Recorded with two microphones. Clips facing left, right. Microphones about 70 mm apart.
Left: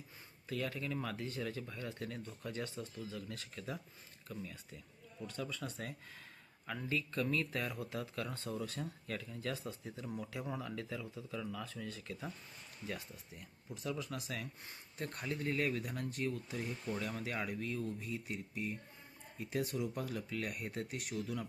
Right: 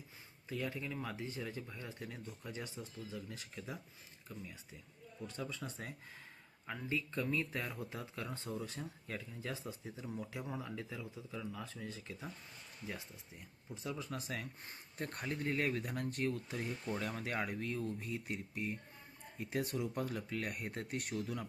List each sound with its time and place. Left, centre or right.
0.4 s speech: centre
14.0 s speech: right